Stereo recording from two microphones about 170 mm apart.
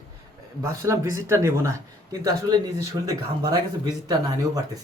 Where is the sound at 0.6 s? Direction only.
15° right (ahead or behind).